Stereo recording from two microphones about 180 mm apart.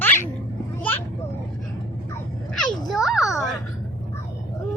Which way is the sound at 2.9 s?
Centre (ahead or behind).